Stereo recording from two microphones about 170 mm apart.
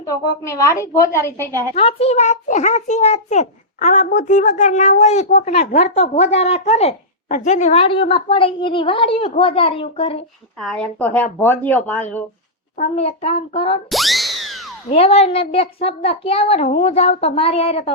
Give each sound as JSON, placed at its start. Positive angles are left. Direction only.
{"t": 0.0, "sound": "a woman's voice", "side_deg": 20}
{"t": 1.7, "sound": "a child's voice", "side_deg": 35}
{"t": 10.6, "sound": "speech", "side_deg": 5}
{"t": 12.7, "sound": "a child's voice", "side_deg": 40}
{"t": 13.9, "sound": "music", "side_deg": 0}
{"t": 14.8, "sound": "a child's voice", "side_deg": 35}